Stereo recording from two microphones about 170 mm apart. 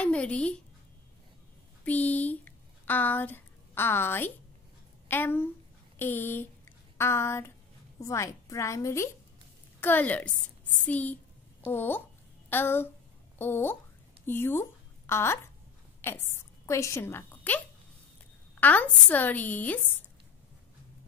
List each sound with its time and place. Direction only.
0.0 s speech: 5° left (ahead or behind)
1.9 s a woman's voice: 10° left (ahead or behind)